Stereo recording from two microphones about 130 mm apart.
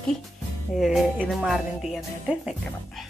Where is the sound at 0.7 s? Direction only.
Centre (ahead or behind).